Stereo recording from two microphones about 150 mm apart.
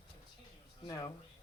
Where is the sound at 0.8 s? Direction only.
20° left (ahead or behind).